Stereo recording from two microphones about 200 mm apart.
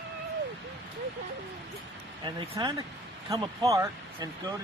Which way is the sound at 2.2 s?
20° right (ahead or behind).